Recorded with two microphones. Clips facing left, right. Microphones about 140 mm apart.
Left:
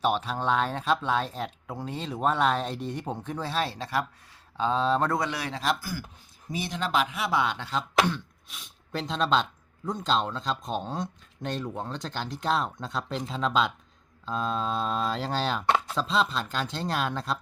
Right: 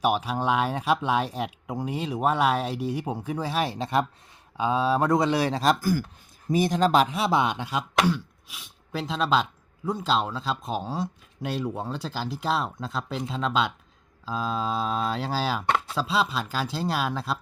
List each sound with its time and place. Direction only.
0.0 s speech: 10° right (ahead or behind)
4.5 s speech: 10° right (ahead or behind)
5.2 s speech: 30° right (ahead or behind)
7.4 s speech: 15° right (ahead or behind)